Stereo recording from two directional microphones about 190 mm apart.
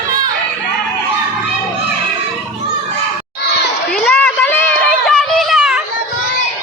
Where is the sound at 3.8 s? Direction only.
5° left (ahead or behind).